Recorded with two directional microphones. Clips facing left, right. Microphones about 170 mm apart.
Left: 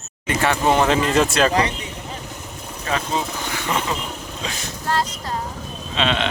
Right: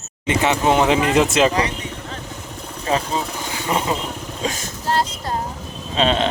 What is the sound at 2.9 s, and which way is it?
Speech, 30° right (ahead or behind).